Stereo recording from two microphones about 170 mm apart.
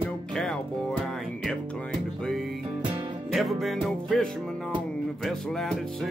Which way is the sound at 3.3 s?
Centre (ahead or behind).